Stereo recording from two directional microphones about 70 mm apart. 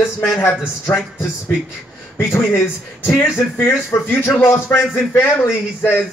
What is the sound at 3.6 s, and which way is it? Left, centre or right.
Speech, left.